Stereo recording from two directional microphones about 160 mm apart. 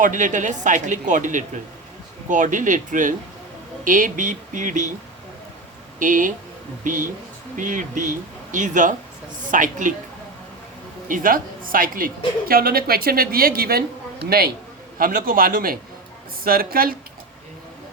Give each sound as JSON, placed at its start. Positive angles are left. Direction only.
{"t": 0.0, "sound": "speech", "side_deg": -55}
{"t": 6.0, "sound": "speech", "side_deg": -55}
{"t": 11.1, "sound": "a woman's voice", "side_deg": -60}